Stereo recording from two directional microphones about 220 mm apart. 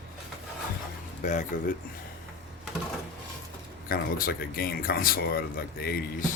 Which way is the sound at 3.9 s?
40° left (ahead or behind).